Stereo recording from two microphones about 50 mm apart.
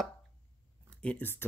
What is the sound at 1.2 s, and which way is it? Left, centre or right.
Speech, left.